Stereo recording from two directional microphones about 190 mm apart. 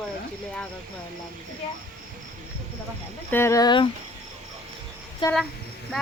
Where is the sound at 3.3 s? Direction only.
15° left (ahead or behind).